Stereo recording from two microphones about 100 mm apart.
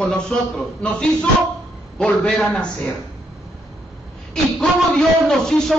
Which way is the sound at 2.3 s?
5° left (ahead or behind).